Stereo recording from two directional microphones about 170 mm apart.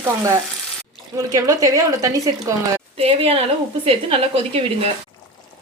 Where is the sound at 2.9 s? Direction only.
35° right (ahead or behind).